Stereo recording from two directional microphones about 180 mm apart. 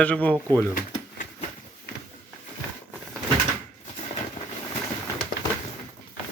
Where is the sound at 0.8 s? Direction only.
50° left (ahead or behind).